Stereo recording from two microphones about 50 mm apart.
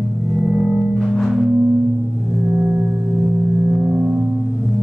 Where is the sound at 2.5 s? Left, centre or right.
Right.